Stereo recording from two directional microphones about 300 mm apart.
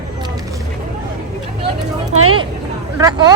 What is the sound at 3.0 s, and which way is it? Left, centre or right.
Speech, centre.